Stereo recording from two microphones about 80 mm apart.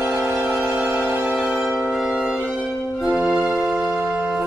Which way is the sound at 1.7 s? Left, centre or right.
Centre.